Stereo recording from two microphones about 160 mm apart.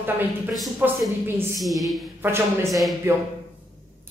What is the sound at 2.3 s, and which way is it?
Speech, 20° right (ahead or behind).